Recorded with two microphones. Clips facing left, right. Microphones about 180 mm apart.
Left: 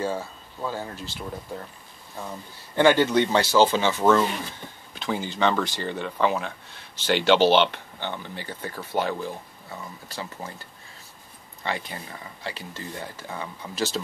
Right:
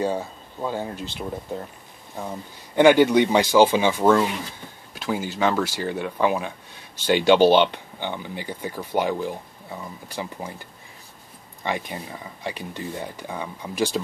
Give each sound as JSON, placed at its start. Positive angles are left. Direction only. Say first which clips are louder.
{"t": 0.0, "sound": "speech", "louder": "right 3 dB", "side_deg": -20}